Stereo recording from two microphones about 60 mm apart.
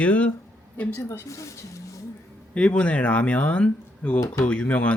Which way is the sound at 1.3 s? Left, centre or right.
Left.